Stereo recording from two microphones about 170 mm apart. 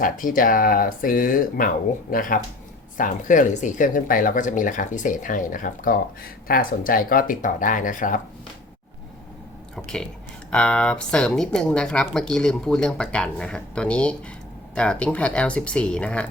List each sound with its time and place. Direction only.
0.0 s speech: 55° left (ahead or behind)
9.7 s a sound: 5° left (ahead or behind)
10.5 s speech: 5° left (ahead or behind)